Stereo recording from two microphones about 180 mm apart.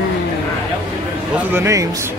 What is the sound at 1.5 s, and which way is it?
Speech, 15° right (ahead or behind).